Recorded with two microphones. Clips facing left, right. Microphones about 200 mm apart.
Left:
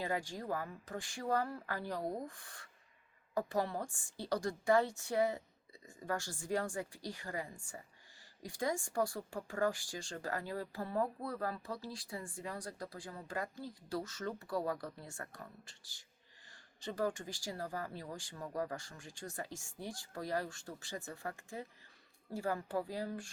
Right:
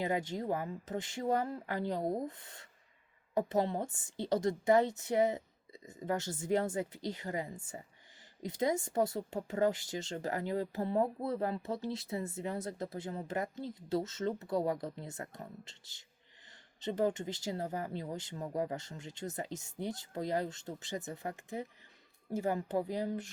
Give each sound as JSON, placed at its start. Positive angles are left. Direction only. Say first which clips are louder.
{"t": 0.0, "sound": "speech", "louder": "right 5 dB", "side_deg": -20}